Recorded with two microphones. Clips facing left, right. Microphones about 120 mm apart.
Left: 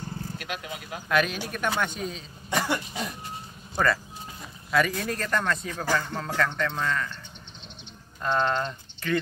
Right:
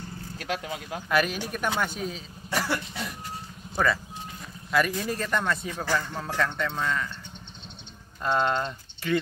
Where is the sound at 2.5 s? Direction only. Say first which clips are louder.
Left 1 dB; 20° left (ahead or behind).